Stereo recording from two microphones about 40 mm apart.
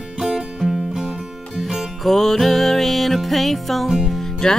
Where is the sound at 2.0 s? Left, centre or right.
Centre.